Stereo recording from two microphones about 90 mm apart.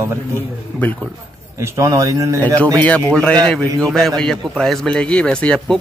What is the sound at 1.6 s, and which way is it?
Speech, 35° right (ahead or behind).